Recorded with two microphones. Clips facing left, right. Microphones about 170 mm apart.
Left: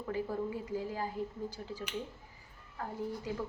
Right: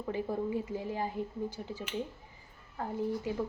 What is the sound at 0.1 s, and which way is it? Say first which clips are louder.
A woman's voice: right 2 dB; 20° right (ahead or behind).